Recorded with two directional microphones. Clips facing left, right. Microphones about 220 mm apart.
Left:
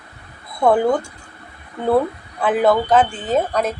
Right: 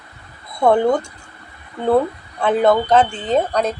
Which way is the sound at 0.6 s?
5° left (ahead or behind).